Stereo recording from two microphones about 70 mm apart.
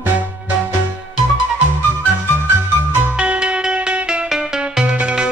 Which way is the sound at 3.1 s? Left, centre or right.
Centre.